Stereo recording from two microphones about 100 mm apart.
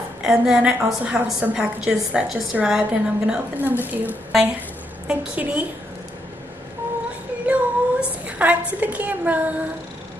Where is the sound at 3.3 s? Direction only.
20° right (ahead or behind).